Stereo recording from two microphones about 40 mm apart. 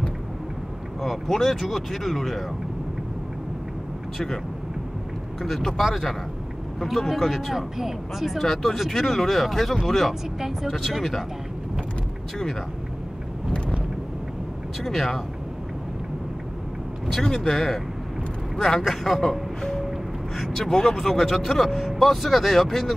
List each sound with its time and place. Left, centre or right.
1.0 s speech: centre
5.4 s speech: centre
8.4 s speech: centre
14.8 s speech: centre
17.1 s speech: centre
20.5 s speech: centre